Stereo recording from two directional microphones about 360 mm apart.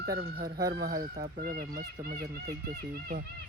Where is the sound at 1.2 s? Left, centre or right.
Right.